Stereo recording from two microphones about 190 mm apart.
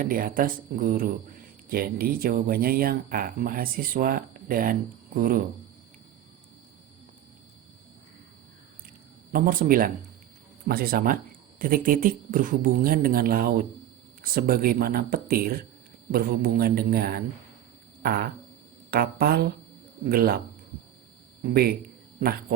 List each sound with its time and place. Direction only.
0.0 s speech: 50° right (ahead or behind)
9.3 s speech: 45° right (ahead or behind)
18.0 s a sound: 55° right (ahead or behind)
18.9 s speech: 55° right (ahead or behind)
21.5 s a man's voice: 55° right (ahead or behind)